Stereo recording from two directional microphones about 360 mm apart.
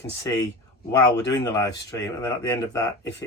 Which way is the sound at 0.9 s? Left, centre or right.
Centre.